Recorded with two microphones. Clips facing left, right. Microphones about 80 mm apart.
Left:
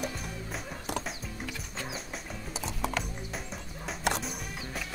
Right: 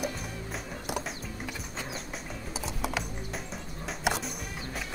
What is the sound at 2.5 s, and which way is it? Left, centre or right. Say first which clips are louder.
Music: even; centre.